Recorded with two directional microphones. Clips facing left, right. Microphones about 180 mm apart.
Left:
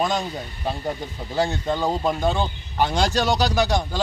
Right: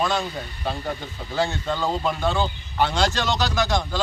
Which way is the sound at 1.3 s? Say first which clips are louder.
Left 2 dB; 15° left (ahead or behind).